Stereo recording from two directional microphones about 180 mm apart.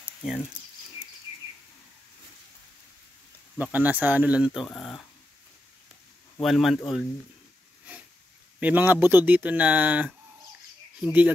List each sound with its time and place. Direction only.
3.5 s speech: 10° right (ahead or behind)
6.4 s speech: centre (ahead or behind)
8.5 s speech: 10° right (ahead or behind)